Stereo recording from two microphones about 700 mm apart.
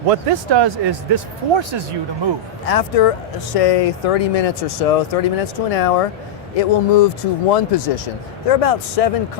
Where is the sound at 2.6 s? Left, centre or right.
Left.